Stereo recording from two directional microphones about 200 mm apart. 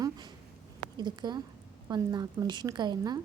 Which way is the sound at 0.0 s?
20° right (ahead or behind).